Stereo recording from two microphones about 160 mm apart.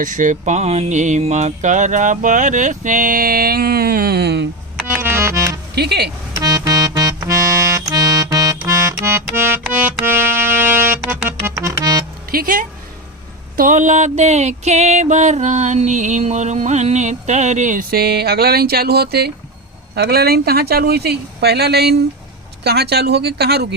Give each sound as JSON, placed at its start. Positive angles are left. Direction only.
{"t": 0.0, "sound": "music", "side_deg": -55}
{"t": 5.0, "sound": "music", "side_deg": -15}
{"t": 5.7, "sound": "speech", "side_deg": -90}
{"t": 6.4, "sound": "music", "side_deg": -20}
{"t": 12.3, "sound": "speech", "side_deg": -65}
{"t": 13.6, "sound": "music", "side_deg": -50}
{"t": 20.0, "sound": "speech", "side_deg": -75}